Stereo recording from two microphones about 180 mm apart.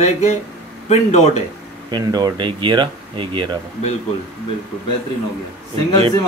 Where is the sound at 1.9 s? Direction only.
25° right (ahead or behind).